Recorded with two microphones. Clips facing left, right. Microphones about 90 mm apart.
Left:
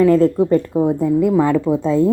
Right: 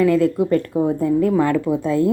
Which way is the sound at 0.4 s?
20° left (ahead or behind).